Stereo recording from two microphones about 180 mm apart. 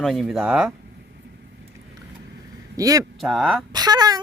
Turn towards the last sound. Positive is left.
turn(degrees=-20)  # may be behind; listen again after turning